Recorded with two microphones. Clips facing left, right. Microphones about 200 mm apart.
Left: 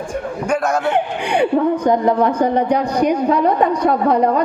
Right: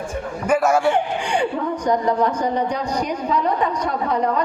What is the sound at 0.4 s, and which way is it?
Speech, 5° right (ahead or behind).